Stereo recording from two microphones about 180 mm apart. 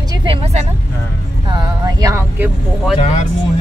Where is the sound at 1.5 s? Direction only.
20° right (ahead or behind).